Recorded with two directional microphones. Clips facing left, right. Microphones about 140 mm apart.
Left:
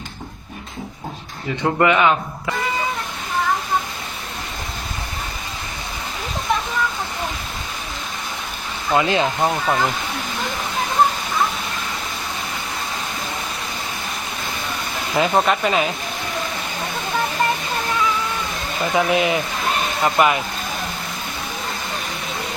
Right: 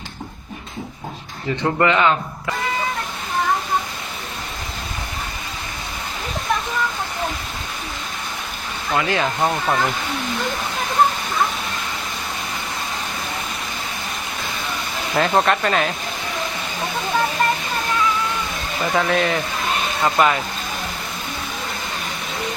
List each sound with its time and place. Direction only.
1.6 s a man's voice: 10° left (ahead or behind)
9.0 s speech: 20° left (ahead or behind)
9.4 s speech: centre (ahead or behind)
15.1 s speech: 5° left (ahead or behind)
18.9 s a man's voice: 10° left (ahead or behind)